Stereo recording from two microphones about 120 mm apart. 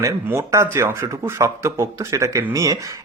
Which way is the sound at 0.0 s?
25° right (ahead or behind).